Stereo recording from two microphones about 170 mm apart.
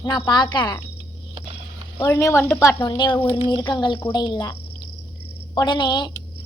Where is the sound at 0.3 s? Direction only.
25° left (ahead or behind).